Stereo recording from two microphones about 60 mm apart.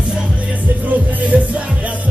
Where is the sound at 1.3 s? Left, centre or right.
Centre.